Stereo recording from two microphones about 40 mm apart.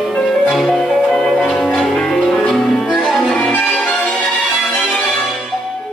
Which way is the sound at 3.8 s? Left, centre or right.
Left.